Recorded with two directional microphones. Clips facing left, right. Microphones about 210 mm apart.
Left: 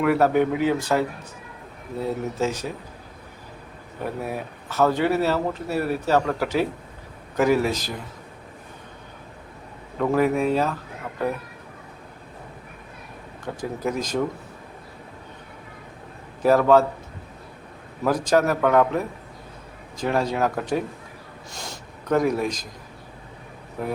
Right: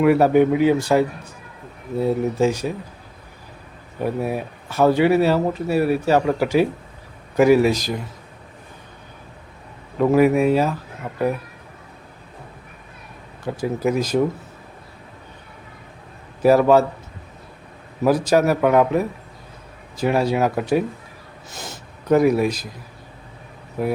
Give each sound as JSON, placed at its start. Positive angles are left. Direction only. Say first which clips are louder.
{"t": 0.0, "sound": "speech", "louder": "right 5 dB", "side_deg": -15}
{"t": 2.4, "sound": "speech", "louder": "right 5 dB", "side_deg": -10}
{"t": 4.3, "sound": "speech", "louder": "right 5 dB", "side_deg": -10}
{"t": 10.0, "sound": "speech", "louder": "right 5 dB", "side_deg": -10}
{"t": 13.4, "sound": "speech", "louder": "right 6 dB", "side_deg": -10}
{"t": 16.4, "sound": "speech", "louder": "right 3 dB", "side_deg": -10}
{"t": 18.0, "sound": "speech", "louder": "right 4 dB", "side_deg": -10}